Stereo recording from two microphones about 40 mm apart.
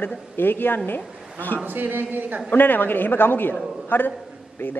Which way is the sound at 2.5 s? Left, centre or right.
Left.